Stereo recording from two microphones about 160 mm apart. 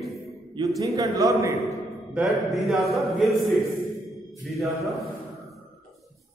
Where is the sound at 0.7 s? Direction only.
20° right (ahead or behind).